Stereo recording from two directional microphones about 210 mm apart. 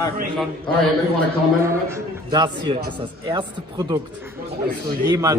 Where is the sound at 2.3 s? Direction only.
20° right (ahead or behind).